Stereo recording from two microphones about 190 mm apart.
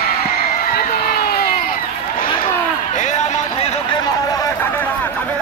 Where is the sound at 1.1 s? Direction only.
50° left (ahead or behind).